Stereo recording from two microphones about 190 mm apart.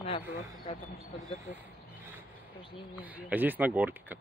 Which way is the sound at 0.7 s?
30° left (ahead or behind).